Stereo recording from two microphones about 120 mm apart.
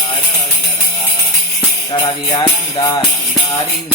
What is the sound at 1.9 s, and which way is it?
Music, 40° left (ahead or behind).